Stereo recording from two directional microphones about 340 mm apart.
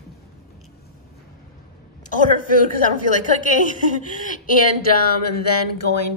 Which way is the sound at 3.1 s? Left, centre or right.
Left.